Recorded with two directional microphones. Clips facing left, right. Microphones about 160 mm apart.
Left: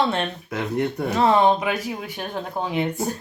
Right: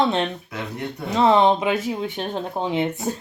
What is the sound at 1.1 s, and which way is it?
Speech, 20° right (ahead or behind).